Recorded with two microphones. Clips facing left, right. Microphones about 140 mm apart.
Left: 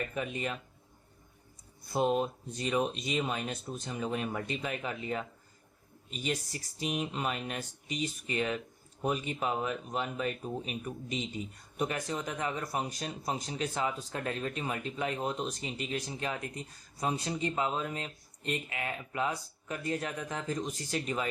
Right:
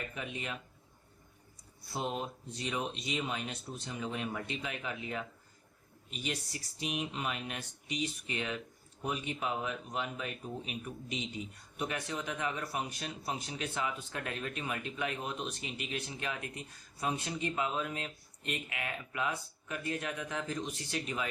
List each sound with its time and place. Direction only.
2.5 s a man's voice: 45° left (ahead or behind)